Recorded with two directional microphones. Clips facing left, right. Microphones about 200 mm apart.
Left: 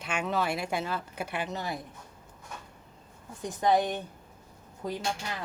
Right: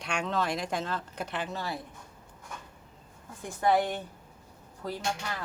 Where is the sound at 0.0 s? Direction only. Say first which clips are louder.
Left 1 dB; 5° left (ahead or behind).